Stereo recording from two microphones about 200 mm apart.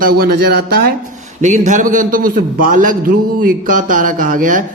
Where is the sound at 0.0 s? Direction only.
50° right (ahead or behind).